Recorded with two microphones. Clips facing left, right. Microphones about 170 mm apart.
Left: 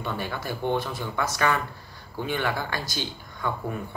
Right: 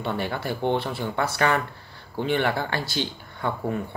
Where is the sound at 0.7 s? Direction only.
60° right (ahead or behind).